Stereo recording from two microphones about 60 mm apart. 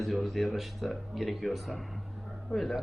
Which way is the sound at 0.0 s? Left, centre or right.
Centre.